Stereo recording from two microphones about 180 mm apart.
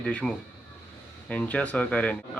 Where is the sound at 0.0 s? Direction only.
5° left (ahead or behind).